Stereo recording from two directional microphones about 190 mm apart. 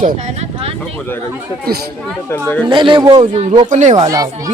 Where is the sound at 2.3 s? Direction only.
10° left (ahead or behind).